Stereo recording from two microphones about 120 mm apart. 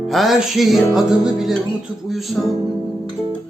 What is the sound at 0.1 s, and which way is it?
Music, centre (ahead or behind).